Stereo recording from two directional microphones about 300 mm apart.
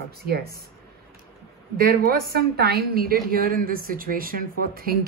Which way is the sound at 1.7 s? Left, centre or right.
Right.